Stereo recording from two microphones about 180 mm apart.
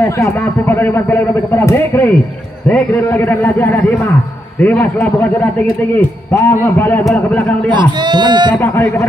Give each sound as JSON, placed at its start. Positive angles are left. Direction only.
{"t": 0.0, "sound": "a man's voice", "side_deg": 15}
{"t": 7.7, "sound": "speech", "side_deg": -25}
{"t": 8.5, "sound": "a man's voice", "side_deg": 10}